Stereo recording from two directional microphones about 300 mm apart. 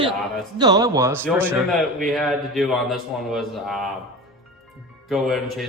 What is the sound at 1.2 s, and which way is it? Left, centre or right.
Music, centre.